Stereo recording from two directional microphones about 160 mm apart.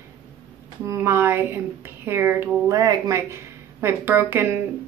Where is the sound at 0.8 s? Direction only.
15° right (ahead or behind).